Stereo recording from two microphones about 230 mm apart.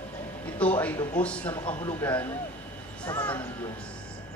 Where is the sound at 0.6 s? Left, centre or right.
Centre.